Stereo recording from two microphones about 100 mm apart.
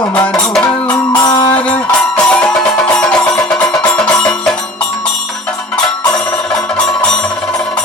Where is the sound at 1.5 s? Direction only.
15° left (ahead or behind).